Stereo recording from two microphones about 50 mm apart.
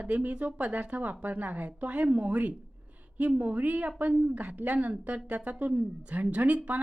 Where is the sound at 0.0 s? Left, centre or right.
Right.